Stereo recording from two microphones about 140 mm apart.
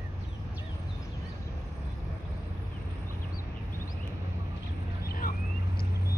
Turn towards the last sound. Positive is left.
turn(degrees=90)